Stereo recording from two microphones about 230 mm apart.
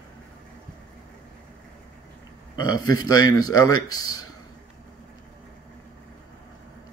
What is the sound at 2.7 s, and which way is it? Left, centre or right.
Speech, centre.